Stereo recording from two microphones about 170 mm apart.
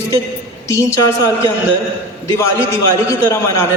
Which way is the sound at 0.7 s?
15° left (ahead or behind).